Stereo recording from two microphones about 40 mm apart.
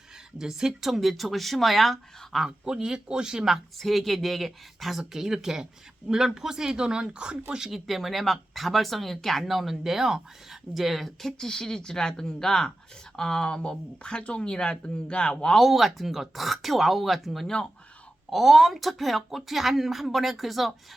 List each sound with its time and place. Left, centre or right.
0.3 s a woman's voice: centre
2.4 s speech: centre
3.5 s a woman's voice: centre; by 7.3 s right
7.7 s a woman's voice: centre; by 15.5 s left
15.5 s a woman's voice: centre